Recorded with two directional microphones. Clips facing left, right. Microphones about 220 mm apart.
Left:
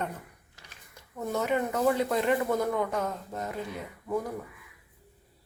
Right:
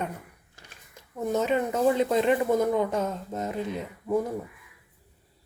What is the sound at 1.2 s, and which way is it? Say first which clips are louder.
Speech: right 3 dB; 20° right (ahead or behind).